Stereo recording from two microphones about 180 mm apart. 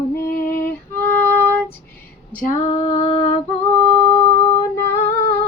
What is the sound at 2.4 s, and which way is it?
Female singing, 45° left (ahead or behind).